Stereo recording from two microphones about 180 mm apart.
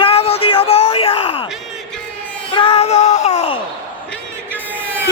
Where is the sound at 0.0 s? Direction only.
35° left (ahead or behind).